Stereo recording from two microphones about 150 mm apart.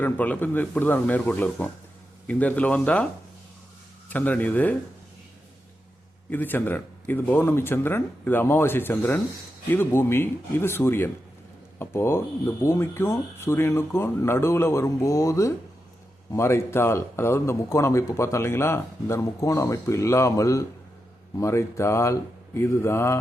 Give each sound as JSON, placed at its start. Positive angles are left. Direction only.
{"t": 0.0, "sound": "speech", "side_deg": 10}
{"t": 4.1, "sound": "speech", "side_deg": 10}
{"t": 6.3, "sound": "a man's voice", "side_deg": 15}